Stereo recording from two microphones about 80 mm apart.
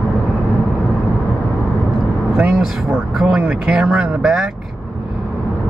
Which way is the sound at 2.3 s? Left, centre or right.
Centre.